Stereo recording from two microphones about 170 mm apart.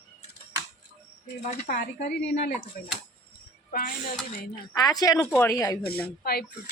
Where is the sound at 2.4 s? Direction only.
75° left (ahead or behind).